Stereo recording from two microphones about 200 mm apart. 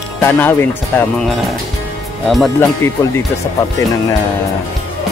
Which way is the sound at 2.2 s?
Centre (ahead or behind).